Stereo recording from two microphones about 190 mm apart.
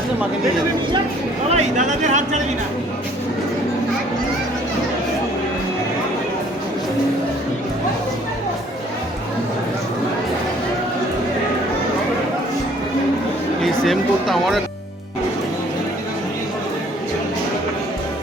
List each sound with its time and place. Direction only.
1.5 s speech: 40° right (ahead or behind)
13.6 s speech: centre (ahead or behind)